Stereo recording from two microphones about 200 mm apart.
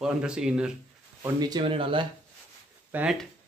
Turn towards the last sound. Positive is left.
turn(degrees=-5)  # may be behind; listen again after turning